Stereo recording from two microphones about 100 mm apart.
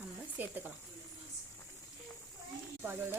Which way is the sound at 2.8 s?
20° right (ahead or behind).